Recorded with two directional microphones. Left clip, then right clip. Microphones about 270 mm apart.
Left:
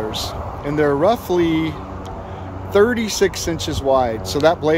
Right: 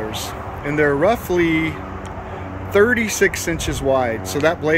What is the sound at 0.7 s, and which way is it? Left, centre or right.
Speech, centre.